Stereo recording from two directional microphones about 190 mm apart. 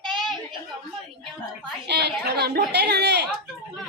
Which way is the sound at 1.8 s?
60° right (ahead or behind).